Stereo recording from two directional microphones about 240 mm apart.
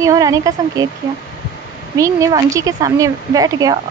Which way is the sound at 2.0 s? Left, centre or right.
Centre.